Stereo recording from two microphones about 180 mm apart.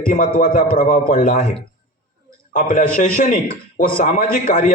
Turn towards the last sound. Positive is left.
turn(degrees=45)  # may be behind; listen again after turning